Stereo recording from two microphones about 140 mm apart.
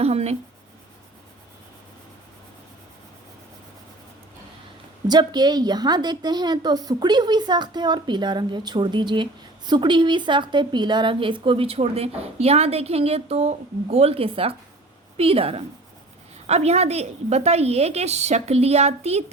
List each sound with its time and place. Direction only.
0.0 s a woman's voice: 50° right (ahead or behind)
5.0 s a woman's voice: 30° right (ahead or behind); by 19.2 s 50° right (ahead or behind)